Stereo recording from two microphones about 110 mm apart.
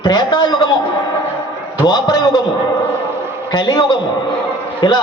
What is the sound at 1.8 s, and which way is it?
Speech, 40° left (ahead or behind).